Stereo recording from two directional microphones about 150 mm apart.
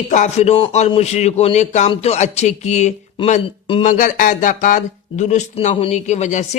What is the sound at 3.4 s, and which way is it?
Speech, 35° left (ahead or behind).